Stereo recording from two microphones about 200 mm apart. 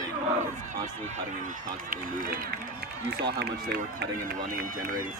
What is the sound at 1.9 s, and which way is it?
Speech, 45° right (ahead or behind).